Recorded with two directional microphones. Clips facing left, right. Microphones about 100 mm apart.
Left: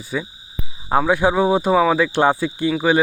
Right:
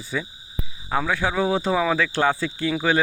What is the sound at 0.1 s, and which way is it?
Speech, 10° left (ahead or behind).